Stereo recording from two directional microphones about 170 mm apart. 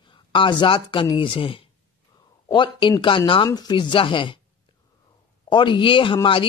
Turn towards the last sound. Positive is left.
turn(degrees=30)  # may be behind; listen again after turning